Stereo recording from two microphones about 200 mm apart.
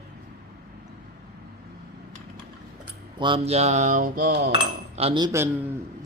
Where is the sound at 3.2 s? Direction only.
30° right (ahead or behind); by 4.5 s 50° right (ahead or behind).